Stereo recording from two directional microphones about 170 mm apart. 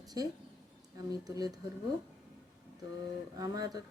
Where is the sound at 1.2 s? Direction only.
20° right (ahead or behind).